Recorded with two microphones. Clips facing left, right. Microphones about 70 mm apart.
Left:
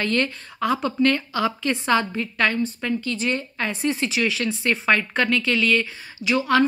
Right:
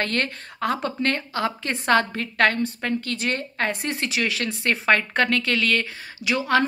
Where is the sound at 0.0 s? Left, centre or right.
Right.